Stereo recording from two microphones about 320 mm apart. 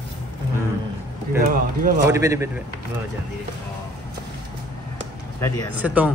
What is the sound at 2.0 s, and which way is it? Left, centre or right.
Speech, centre.